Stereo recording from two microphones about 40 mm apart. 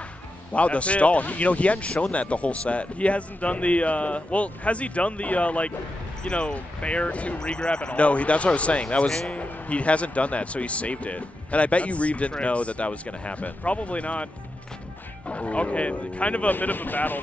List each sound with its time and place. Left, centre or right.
0.5 s speech: left
7.3 s speech: left
16.4 s speech: left